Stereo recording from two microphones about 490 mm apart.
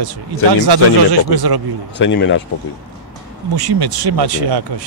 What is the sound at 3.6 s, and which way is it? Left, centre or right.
A man's voice, right.